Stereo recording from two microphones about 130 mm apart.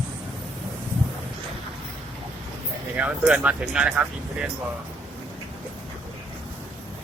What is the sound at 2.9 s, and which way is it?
Speech, 10° right (ahead or behind).